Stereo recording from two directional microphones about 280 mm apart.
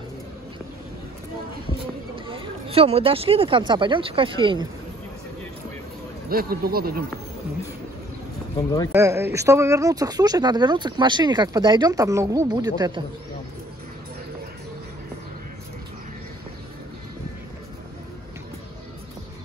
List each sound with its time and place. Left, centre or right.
2.1 s speech: centre
6.2 s speech: right
8.9 s speech: centre